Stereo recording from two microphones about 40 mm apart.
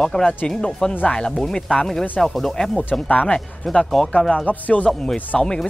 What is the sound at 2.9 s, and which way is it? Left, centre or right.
Speech, left.